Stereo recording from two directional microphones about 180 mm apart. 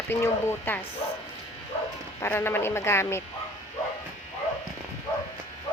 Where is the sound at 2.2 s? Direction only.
15° left (ahead or behind).